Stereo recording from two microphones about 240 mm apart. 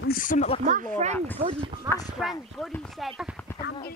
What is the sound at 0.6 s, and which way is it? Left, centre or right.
Speech, right.